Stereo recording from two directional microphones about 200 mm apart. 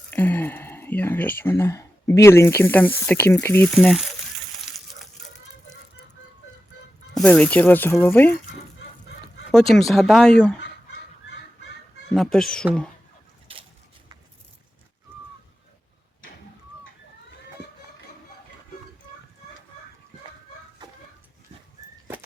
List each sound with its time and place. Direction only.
0.1 s speech: 10° left (ahead or behind)
4.7 s a sound: centre (ahead or behind)
7.1 s speech: 5° left (ahead or behind)
9.5 s speech: centre (ahead or behind)
12.1 s speech: centre (ahead or behind)
13.5 s a sound: 25° right (ahead or behind)